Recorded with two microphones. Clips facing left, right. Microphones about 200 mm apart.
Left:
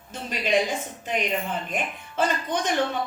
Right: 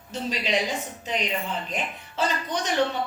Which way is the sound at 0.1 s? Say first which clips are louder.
Left 2 dB; 50° left (ahead or behind).